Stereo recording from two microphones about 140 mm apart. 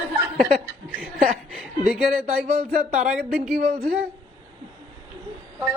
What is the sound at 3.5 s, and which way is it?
Speech, 90° right.